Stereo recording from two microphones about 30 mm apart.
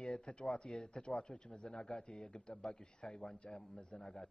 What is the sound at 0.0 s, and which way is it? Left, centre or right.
Speech, left.